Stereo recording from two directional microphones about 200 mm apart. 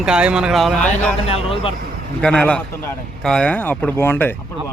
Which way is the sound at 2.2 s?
5° left (ahead or behind).